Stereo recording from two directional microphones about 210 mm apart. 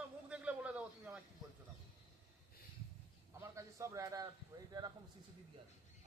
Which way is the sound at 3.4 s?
15° right (ahead or behind).